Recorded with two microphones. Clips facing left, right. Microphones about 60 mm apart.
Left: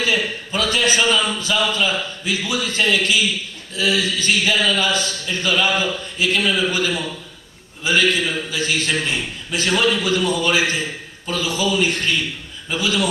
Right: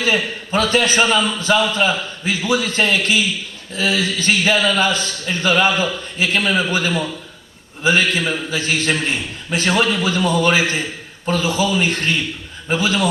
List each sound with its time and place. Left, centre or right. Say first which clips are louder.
0.0 s a man's voice: right 2 dB; right